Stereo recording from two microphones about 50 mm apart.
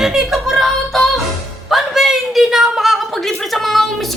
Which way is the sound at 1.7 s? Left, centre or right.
Centre.